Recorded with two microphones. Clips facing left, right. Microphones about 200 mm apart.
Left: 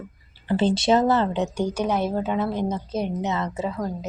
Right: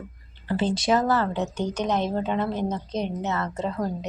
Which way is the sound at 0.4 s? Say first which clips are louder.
Left 3 dB; 25° left (ahead or behind).